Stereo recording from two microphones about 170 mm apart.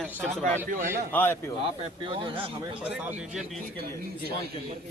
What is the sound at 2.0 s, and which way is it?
Speech, 30° right (ahead or behind).